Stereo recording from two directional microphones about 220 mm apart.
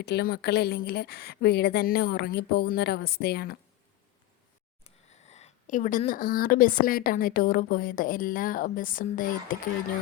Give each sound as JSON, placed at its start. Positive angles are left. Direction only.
{"t": 0.0, "sound": "a woman's voice", "side_deg": 45}
{"t": 4.8, "sound": "speech", "side_deg": 30}